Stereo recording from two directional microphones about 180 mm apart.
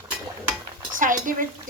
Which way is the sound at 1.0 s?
45° right (ahead or behind).